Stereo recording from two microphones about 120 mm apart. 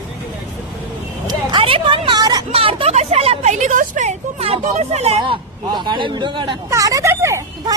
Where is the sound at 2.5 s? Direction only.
50° right (ahead or behind).